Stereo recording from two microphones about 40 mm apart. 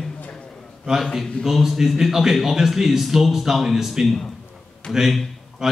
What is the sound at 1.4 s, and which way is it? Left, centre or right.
Speech, centre.